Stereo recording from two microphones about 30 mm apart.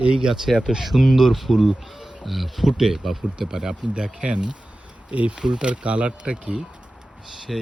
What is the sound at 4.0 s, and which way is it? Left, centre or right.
Speech, right.